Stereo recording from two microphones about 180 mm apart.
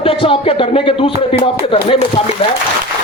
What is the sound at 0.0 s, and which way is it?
A man's voice, 30° left (ahead or behind).